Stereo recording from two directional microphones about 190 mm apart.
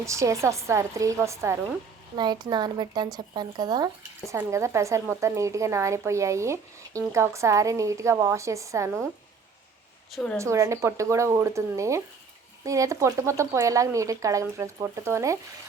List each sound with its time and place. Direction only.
0.0 s speech: 15° right (ahead or behind)
10.3 s speech: 15° right (ahead or behind)